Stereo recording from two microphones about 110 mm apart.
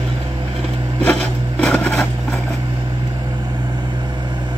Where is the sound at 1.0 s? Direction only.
10° left (ahead or behind).